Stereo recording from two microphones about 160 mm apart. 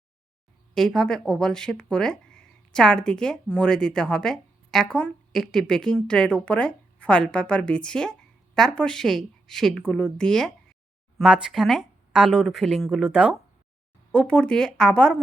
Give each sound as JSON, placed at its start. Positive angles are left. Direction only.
{"t": 0.7, "sound": "speech", "side_deg": 5}
{"t": 14.1, "sound": "speech", "side_deg": 10}